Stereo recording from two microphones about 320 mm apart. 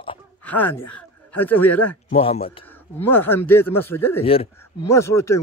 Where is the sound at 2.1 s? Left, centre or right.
Centre.